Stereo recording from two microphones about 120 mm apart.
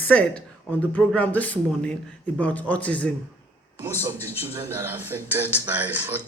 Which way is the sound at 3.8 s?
20° right (ahead or behind).